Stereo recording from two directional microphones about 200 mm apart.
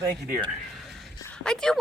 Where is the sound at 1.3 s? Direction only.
5° left (ahead or behind).